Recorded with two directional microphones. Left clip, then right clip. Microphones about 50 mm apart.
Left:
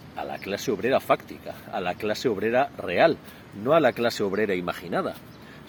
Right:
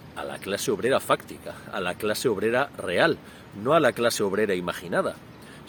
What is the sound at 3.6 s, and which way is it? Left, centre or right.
Speech, right.